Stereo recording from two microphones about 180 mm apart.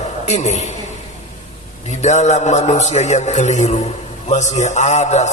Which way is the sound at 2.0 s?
40° left (ahead or behind).